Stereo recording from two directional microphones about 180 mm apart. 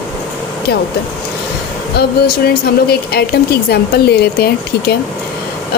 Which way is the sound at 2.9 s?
60° left (ahead or behind).